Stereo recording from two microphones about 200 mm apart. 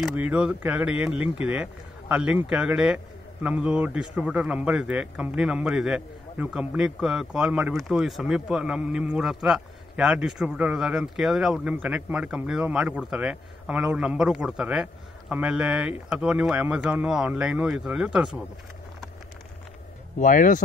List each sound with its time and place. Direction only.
0.0 s a man's voice: 5° right (ahead or behind)
20.2 s speech: 40° left (ahead or behind)